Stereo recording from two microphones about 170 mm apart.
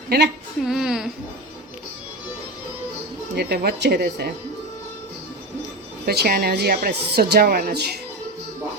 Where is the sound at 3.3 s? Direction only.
70° right (ahead or behind).